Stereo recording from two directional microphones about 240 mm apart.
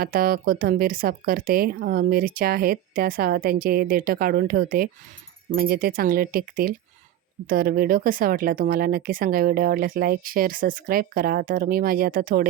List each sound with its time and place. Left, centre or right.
0.0 s speech: right